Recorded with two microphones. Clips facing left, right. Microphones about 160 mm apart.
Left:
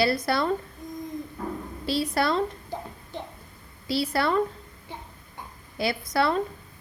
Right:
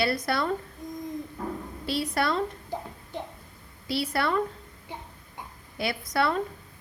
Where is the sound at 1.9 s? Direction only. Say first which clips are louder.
Left 2 dB; 35° left (ahead or behind).